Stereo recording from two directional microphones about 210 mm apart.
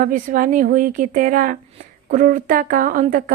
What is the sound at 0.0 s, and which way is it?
Speech, 40° right (ahead or behind).